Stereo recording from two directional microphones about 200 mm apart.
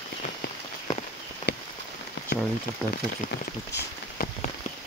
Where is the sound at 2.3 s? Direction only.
60° left (ahead or behind).